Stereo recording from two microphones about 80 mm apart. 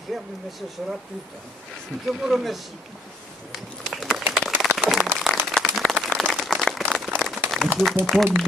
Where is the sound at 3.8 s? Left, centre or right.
Centre.